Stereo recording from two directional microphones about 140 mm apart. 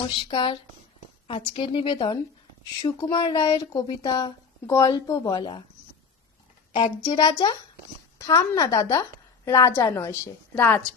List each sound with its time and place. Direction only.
0.2 s a woman's voice: 35° left (ahead or behind)
7.1 s a woman's voice: 30° left (ahead or behind); by 10.8 s 15° left (ahead or behind)